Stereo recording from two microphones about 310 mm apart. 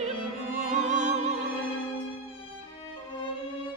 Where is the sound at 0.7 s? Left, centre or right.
Right.